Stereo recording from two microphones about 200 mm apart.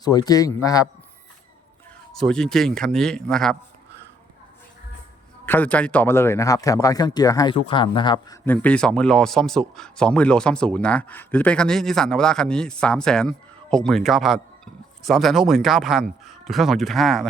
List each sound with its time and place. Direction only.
0.0 s a man's voice: 20° left (ahead or behind)
2.1 s speech: centre (ahead or behind)
5.5 s a man's voice: 10° left (ahead or behind)
8.4 s speech: 5° left (ahead or behind)